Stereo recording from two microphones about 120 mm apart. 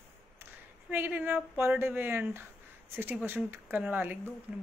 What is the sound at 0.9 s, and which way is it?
Speech, 15° right (ahead or behind).